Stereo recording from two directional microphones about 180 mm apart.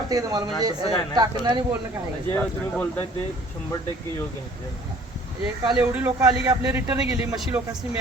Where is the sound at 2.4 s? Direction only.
10° left (ahead or behind).